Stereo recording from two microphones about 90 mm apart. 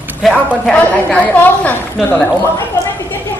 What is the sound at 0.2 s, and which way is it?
Speech, centre (ahead or behind).